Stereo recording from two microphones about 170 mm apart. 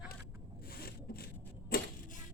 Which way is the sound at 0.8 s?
60° left (ahead or behind).